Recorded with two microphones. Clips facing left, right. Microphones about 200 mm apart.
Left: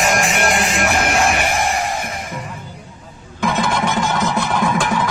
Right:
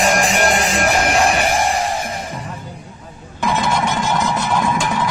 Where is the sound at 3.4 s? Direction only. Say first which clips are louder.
Even; 50° left (ahead or behind).